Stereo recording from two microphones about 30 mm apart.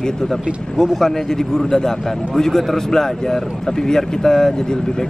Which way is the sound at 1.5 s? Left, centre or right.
Centre.